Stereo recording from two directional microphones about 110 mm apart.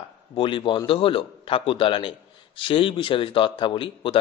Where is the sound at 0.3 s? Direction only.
50° left (ahead or behind).